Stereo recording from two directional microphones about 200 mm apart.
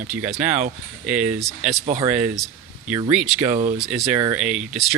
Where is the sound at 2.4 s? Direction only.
5° right (ahead or behind).